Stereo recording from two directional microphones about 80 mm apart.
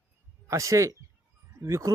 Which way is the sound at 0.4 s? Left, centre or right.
Right.